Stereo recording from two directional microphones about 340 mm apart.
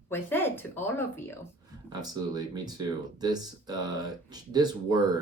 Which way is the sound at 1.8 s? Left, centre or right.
Centre.